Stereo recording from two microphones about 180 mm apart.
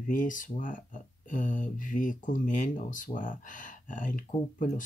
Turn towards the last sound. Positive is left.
turn(degrees=45)  # may be behind; listen again after turning